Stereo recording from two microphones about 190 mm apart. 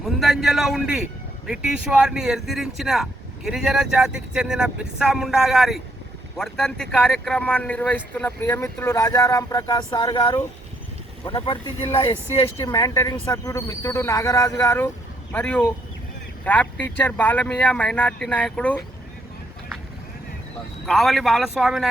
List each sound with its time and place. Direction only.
0.0 s speech: centre (ahead or behind)
20.8 s speech: centre (ahead or behind)